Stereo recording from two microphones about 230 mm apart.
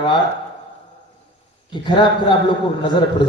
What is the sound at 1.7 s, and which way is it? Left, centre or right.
Speech, centre.